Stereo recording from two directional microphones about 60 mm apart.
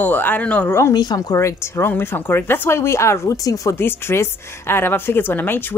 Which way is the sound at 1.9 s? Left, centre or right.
Left.